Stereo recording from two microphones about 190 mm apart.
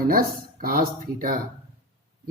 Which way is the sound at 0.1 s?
50° right (ahead or behind).